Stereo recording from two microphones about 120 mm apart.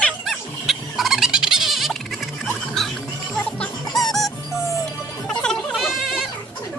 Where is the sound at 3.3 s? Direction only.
5° left (ahead or behind).